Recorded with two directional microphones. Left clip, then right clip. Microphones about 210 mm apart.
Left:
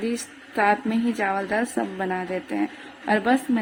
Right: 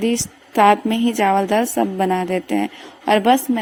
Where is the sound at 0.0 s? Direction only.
35° right (ahead or behind).